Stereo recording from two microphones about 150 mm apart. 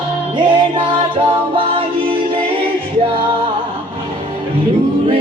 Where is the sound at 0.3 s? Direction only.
35° right (ahead or behind).